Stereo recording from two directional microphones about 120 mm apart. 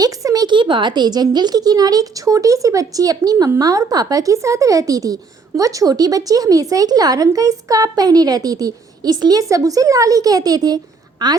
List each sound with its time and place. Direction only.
0.0 s speech: 30° right (ahead or behind)